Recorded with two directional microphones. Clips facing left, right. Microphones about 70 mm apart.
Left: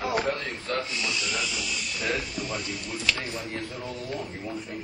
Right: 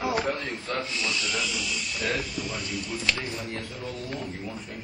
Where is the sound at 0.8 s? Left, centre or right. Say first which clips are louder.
Right 1 dB; centre.